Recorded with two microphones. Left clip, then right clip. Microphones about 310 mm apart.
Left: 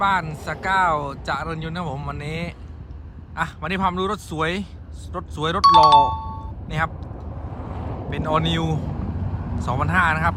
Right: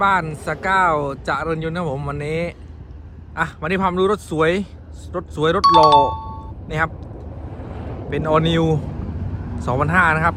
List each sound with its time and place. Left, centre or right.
0.0 s a man's voice: centre
7.5 s vehicle: left
8.1 s speech: centre